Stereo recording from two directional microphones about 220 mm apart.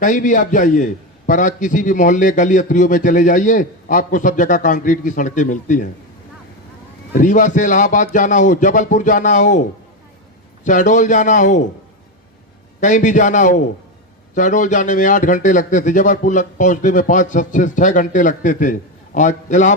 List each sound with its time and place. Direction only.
0.0 s a man's voice: 35° left (ahead or behind)
7.1 s a man's voice: 35° left (ahead or behind)
12.8 s a man's voice: 35° left (ahead or behind)